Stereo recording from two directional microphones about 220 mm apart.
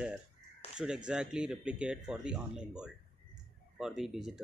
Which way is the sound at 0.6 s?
25° left (ahead or behind).